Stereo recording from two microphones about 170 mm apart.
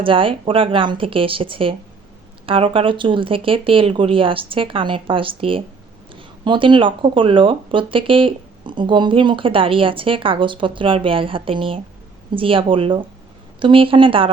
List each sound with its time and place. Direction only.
0.0 s speech: 30° right (ahead or behind)